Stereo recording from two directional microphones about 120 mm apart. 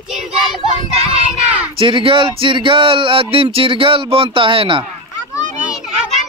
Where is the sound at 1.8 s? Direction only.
45° right (ahead or behind).